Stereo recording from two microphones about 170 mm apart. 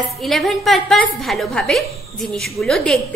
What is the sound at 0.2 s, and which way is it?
A woman's voice, centre (ahead or behind).